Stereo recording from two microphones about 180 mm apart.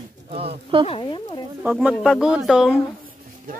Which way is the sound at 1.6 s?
5° right (ahead or behind).